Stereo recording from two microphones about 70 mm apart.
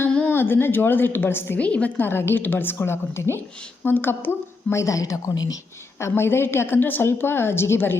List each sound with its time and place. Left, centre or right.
0.3 s a woman's voice: left
1.5 s a woman's voice: centre
2.0 s a woman's voice: left
6.0 s a woman's voice: left